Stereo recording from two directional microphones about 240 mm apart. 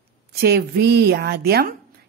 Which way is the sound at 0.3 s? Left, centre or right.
Right.